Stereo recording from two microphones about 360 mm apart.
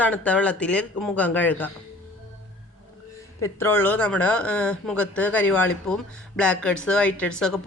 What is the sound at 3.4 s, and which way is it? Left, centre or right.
Speech, centre.